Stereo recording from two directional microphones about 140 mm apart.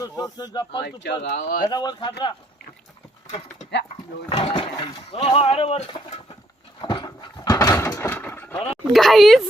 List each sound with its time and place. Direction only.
0.0 s speech: 30° left (ahead or behind)
1.3 s speech: 75° left (ahead or behind)
1.6 s speech: 30° left (ahead or behind)
4.3 s speech: 40° left (ahead or behind)
6.8 s a sound: 30° left (ahead or behind); by 8.5 s 15° left (ahead or behind)
8.7 s speech: centre (ahead or behind)